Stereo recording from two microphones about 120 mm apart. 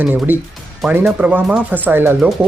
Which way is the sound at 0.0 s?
15° right (ahead or behind).